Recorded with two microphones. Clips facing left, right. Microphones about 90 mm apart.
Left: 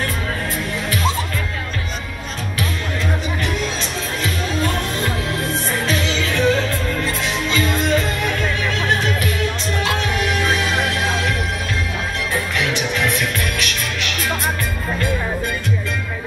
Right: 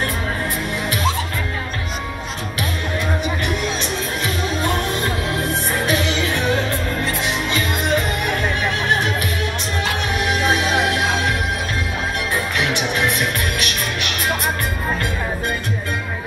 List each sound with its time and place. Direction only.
5.5 s music: 20° right (ahead or behind)
10.1 s music: 20° right (ahead or behind)
12.5 s music: 20° right (ahead or behind)